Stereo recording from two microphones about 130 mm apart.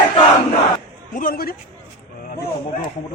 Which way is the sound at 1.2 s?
90° left.